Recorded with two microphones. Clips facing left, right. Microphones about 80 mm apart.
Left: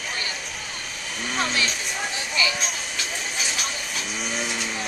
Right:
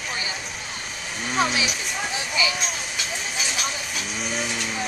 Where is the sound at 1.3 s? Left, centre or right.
Centre.